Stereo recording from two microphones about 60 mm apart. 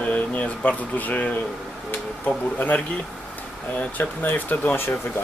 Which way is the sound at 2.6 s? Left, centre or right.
Left.